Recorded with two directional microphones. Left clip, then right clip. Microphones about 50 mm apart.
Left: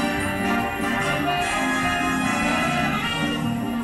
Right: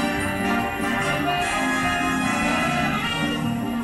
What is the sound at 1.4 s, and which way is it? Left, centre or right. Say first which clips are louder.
Music: even; centre.